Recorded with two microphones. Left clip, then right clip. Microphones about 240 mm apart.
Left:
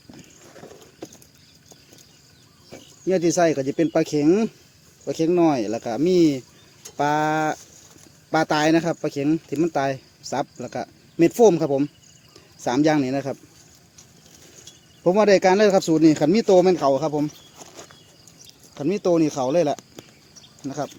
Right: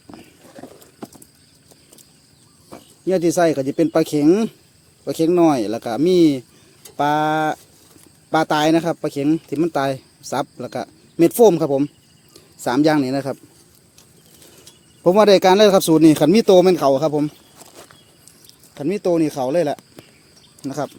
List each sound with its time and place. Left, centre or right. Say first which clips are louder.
3.1 s speech: right 3 dB; centre
15.0 s speech: right 4 dB; right
17.6 s a sound: even; centre
18.4 s speech: right 1 dB; centre
20.6 s speech: right 4 dB; right